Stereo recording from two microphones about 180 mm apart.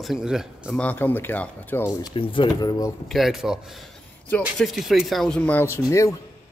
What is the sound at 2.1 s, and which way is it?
Speech, 30° left (ahead or behind).